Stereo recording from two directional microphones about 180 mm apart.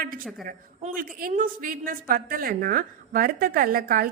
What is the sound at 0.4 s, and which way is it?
A woman's voice, 50° right (ahead or behind).